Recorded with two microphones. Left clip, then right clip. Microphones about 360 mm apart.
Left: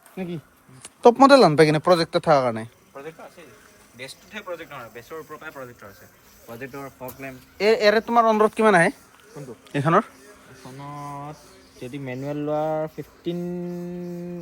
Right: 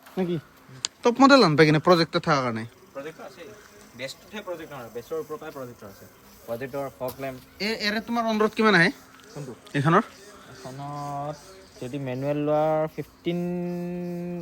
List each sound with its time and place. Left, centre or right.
1.1 s speech: centre
3.9 s speech: centre
6.5 s speech: right
7.6 s speech: centre
11.8 s speech: centre
12.0 s speech: centre